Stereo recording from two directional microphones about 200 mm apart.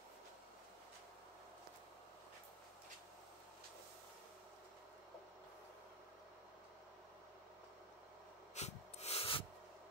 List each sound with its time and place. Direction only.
8.5 s snort: 30° left (ahead or behind)